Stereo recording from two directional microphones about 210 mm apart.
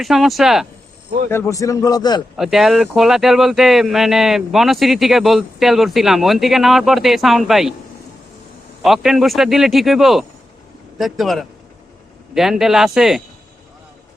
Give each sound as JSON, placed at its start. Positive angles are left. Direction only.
{"t": 0.0, "sound": "speech", "side_deg": 0}
{"t": 1.3, "sound": "a man's voice", "side_deg": 15}
{"t": 2.3, "sound": "speech", "side_deg": 0}
{"t": 8.8, "sound": "speech", "side_deg": 0}